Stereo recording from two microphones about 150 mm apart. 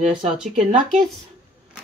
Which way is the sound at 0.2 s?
50° right (ahead or behind).